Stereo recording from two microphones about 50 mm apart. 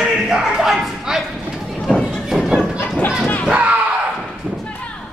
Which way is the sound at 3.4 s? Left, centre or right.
Right.